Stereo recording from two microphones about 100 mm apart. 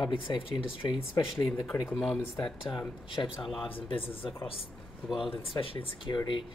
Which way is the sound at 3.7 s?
65° left (ahead or behind).